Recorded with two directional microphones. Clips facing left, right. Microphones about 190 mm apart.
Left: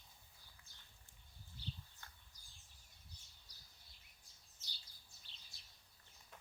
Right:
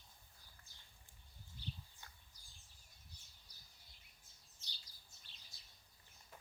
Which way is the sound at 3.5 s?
90° left.